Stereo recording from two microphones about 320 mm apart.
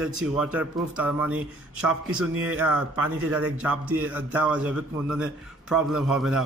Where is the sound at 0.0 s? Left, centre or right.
Centre.